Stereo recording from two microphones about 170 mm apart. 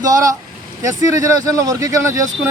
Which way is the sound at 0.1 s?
20° right (ahead or behind).